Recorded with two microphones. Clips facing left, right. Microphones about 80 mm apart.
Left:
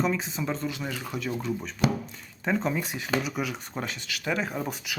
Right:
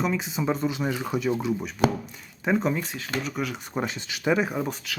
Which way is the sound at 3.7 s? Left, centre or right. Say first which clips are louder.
Right 4 dB; right.